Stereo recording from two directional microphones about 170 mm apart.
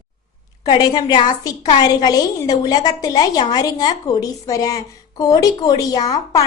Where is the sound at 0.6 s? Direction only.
25° left (ahead or behind).